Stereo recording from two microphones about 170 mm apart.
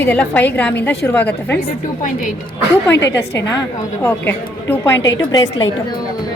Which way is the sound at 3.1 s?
15° left (ahead or behind).